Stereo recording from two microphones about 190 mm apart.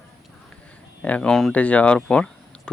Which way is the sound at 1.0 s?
5° left (ahead or behind).